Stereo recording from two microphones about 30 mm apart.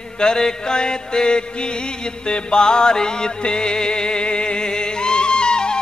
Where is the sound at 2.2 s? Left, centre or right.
Left.